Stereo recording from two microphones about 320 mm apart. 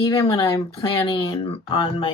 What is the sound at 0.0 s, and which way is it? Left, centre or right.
Speech, centre.